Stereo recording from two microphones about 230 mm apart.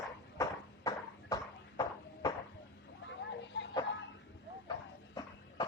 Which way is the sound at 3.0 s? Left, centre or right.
Left.